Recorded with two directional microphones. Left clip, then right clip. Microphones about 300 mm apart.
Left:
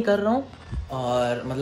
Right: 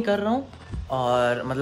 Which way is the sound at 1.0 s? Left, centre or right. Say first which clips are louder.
Right 2 dB; right.